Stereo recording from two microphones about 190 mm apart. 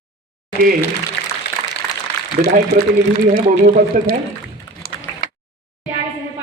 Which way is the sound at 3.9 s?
45° right (ahead or behind).